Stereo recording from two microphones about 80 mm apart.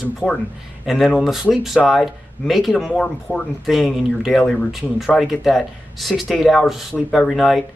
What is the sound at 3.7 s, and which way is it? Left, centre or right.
Speech, centre.